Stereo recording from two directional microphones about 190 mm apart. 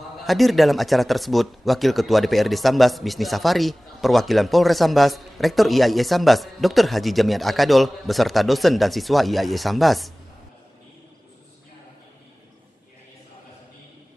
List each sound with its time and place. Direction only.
0.2 s speech: centre (ahead or behind)